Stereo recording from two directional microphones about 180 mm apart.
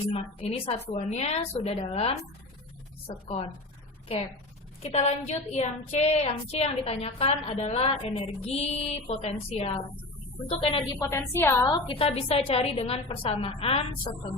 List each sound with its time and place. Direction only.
0.1 s child singing: 30° left (ahead or behind)
4.8 s child singing: 35° left (ahead or behind)
11.0 s a woman's voice: 15° left (ahead or behind)
11.7 s child singing: 30° left (ahead or behind)